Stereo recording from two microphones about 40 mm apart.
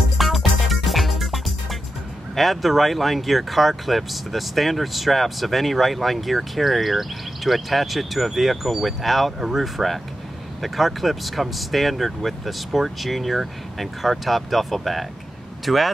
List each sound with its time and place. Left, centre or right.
0.2 s music: centre
2.3 s speech: centre